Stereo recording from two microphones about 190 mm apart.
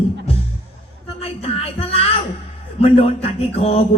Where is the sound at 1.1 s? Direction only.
30° left (ahead or behind).